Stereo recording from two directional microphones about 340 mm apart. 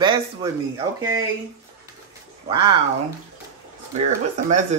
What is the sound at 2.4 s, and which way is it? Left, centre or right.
Speech, centre.